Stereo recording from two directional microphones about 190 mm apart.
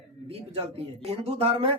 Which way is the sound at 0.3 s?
30° right (ahead or behind).